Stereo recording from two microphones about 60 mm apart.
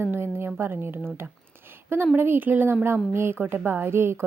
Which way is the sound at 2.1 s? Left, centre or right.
Right.